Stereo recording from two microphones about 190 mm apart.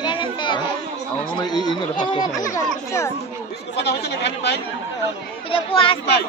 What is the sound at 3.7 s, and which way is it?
Speech, 60° left (ahead or behind).